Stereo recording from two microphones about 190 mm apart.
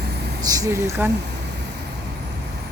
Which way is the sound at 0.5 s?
15° right (ahead or behind).